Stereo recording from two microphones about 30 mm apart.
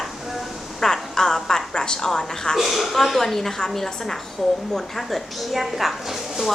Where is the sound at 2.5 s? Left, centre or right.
Centre.